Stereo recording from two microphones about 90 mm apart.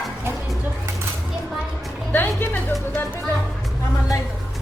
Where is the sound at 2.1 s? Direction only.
20° left (ahead or behind).